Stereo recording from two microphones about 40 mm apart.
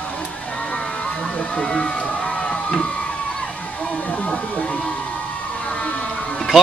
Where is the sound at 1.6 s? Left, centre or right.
Left.